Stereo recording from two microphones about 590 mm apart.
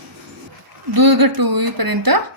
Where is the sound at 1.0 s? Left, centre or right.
Right.